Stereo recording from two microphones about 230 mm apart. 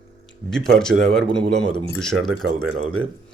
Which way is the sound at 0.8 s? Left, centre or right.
Centre.